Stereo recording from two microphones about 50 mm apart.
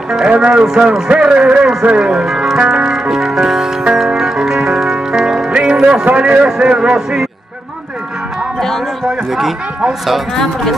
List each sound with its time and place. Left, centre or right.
0.3 s a man's voice: right
2.2 s music: centre
6.0 s a man's voice: right
8.5 s speech: centre
10.3 s speech: centre